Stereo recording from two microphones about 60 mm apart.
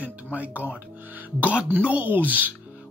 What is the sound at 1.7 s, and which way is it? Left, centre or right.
Speech, right.